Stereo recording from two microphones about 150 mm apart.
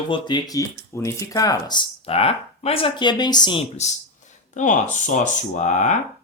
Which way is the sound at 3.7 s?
50° left (ahead or behind).